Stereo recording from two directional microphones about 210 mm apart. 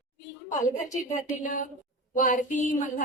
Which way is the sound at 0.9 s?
35° left (ahead or behind).